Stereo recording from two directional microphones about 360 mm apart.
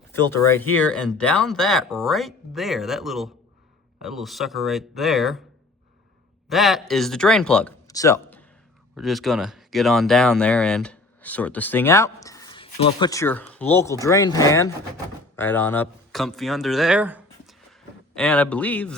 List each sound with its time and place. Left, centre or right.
0.1 s speech: centre
6.5 s speech: centre